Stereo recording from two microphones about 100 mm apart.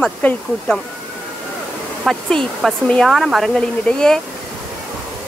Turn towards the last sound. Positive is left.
turn(degrees=5)  # may be behind; listen again after turning